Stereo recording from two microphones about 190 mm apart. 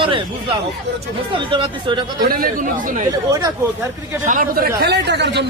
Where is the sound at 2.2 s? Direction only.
50° right (ahead or behind).